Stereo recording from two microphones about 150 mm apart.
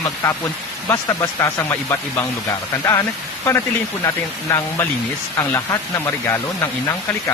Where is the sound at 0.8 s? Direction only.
20° left (ahead or behind).